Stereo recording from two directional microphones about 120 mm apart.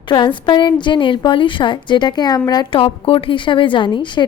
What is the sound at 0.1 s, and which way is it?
A woman's voice, 40° left (ahead or behind).